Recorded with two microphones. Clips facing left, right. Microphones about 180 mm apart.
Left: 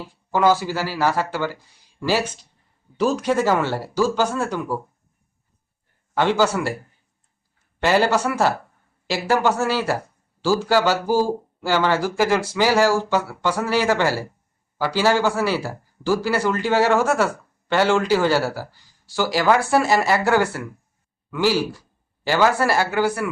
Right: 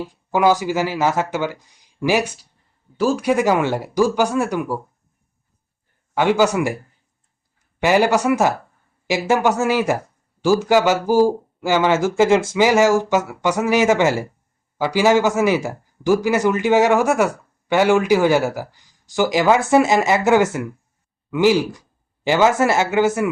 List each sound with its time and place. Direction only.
0.0 s speech: 15° right (ahead or behind)
6.1 s speech: 15° right (ahead or behind)
7.8 s speech: 15° right (ahead or behind)